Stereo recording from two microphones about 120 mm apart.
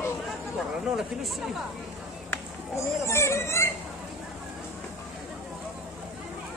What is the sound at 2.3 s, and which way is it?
Speech, 25° left (ahead or behind).